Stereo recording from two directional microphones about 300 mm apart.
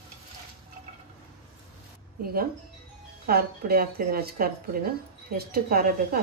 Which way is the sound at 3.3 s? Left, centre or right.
Right.